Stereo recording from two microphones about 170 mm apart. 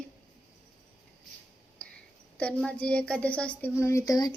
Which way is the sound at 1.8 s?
5° left (ahead or behind).